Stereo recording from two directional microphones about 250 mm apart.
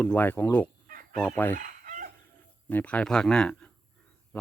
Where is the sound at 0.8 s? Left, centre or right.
Right.